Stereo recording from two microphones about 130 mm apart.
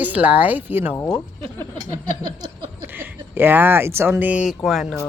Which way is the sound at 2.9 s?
15° right (ahead or behind).